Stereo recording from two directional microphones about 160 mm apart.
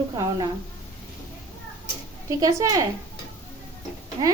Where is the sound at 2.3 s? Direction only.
20° right (ahead or behind).